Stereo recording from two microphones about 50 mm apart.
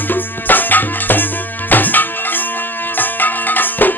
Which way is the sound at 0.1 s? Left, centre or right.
Left.